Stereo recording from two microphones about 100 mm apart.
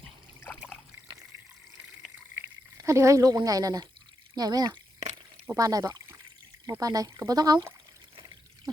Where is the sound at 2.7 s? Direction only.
30° right (ahead or behind).